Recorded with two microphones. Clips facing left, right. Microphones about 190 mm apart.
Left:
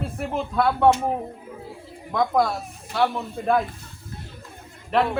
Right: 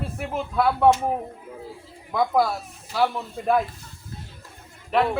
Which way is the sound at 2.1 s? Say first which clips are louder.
Even; 5° right (ahead or behind).